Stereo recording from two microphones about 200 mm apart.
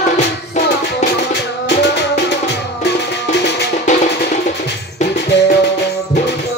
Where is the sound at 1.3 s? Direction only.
60° left (ahead or behind).